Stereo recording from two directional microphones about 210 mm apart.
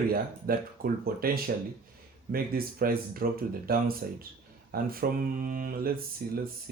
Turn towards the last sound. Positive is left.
turn(degrees=-45)  # may be behind; listen again after turning